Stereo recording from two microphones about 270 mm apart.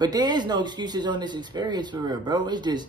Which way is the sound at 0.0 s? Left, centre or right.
Centre.